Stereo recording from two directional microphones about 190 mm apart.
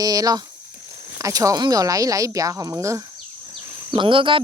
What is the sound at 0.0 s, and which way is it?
Speech, 20° right (ahead or behind).